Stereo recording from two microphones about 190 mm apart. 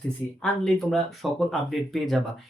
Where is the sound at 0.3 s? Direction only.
5° left (ahead or behind).